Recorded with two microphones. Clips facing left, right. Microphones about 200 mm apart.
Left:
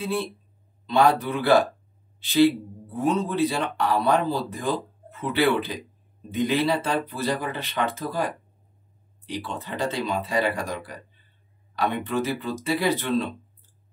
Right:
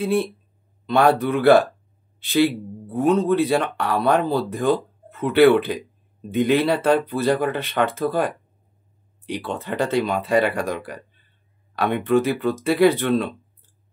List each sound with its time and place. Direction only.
0.8 s speech: 60° right (ahead or behind)
2.1 s a sound: 55° right (ahead or behind)
2.9 s speech: 55° right (ahead or behind)